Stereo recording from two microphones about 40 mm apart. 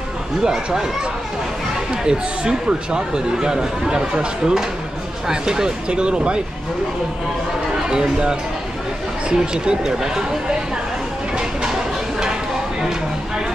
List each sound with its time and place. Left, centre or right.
2.0 s speech: right
7.7 s speech: centre